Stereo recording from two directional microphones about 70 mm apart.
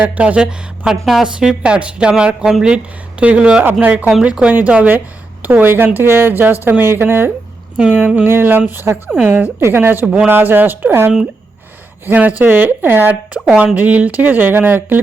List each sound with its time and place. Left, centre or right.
0.0 s a woman's voice: centre
1.4 s speech: centre
3.6 s a woman's voice: right
7.8 s speech: centre
8.3 s a woman's voice: right